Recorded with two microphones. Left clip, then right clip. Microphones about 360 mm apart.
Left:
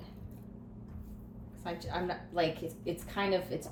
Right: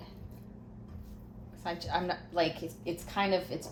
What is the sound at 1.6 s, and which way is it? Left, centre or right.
A woman's voice, centre.